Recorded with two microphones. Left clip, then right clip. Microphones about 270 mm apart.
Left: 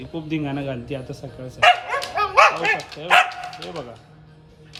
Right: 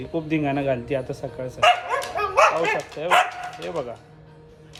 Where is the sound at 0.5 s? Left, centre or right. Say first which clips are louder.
Right 5 dB; centre.